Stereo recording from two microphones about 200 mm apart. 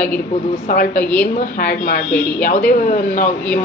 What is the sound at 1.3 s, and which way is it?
Speech, 45° left (ahead or behind).